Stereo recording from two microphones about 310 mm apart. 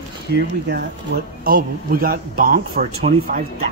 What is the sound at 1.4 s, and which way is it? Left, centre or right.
A man's voice, right.